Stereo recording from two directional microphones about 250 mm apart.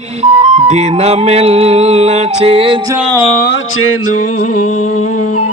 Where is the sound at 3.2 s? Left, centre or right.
Left.